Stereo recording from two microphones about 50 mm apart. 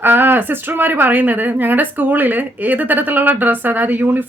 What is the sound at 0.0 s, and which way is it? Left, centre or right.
Speech, right.